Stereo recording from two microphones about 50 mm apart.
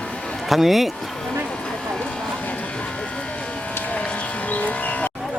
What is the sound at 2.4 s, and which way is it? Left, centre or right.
Vehicle, left.